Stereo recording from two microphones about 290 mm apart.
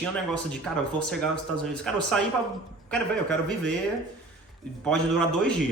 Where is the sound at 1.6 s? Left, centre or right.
Centre.